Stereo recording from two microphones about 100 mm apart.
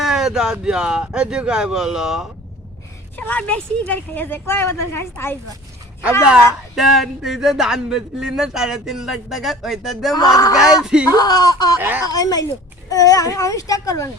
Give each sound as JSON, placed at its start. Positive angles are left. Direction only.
{"t": 0.0, "sound": "speech", "side_deg": -5}
{"t": 3.2, "sound": "a woman's voice", "side_deg": 15}
{"t": 6.7, "sound": "speech", "side_deg": 0}
{"t": 10.2, "sound": "a child's voice", "side_deg": 40}
{"t": 10.6, "sound": "speech", "side_deg": -5}
{"t": 11.1, "sound": "a child's voice", "side_deg": 40}
{"t": 11.8, "sound": "speech", "side_deg": -20}
{"t": 12.0, "sound": "a child's voice", "side_deg": 40}